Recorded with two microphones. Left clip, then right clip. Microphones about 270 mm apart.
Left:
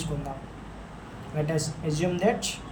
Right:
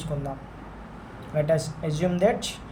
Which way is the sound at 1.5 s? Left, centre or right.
Right.